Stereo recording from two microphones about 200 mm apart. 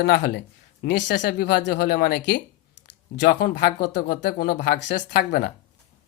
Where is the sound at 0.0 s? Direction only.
55° left (ahead or behind).